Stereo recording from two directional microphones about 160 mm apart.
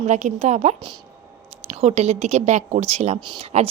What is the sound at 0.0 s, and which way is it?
Speech, 45° right (ahead or behind).